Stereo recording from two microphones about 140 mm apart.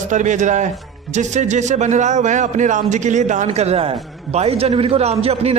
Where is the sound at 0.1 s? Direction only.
60° right (ahead or behind).